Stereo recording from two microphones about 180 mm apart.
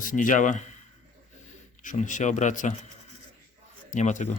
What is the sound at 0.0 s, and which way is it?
Speech, 45° left (ahead or behind).